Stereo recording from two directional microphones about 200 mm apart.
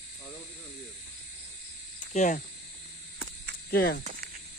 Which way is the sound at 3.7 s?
55° left (ahead or behind).